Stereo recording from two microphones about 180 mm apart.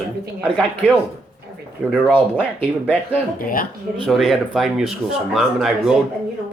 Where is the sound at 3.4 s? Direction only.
50° left (ahead or behind).